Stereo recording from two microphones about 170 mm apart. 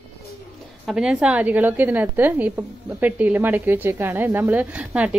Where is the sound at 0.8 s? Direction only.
5° right (ahead or behind).